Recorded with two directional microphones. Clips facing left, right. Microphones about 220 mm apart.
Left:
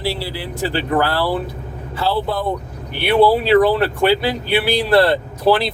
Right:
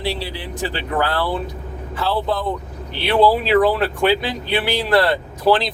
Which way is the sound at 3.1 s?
10° left (ahead or behind).